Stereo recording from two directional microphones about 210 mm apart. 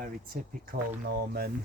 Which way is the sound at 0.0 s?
40° right (ahead or behind).